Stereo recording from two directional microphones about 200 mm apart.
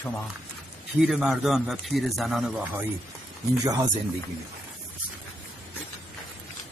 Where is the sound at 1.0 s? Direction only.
Centre (ahead or behind).